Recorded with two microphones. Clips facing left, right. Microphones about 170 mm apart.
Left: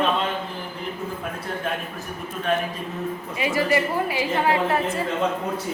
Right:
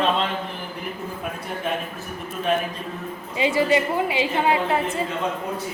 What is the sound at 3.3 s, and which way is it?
A woman's voice, 25° right (ahead or behind).